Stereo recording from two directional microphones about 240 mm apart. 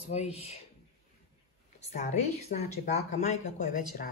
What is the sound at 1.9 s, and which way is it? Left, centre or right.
Speech, left.